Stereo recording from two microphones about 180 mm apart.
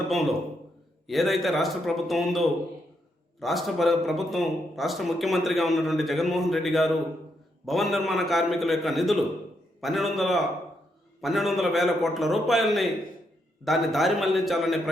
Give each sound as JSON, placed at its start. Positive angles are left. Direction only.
{"t": 0.1, "sound": "a man's voice", "side_deg": 0}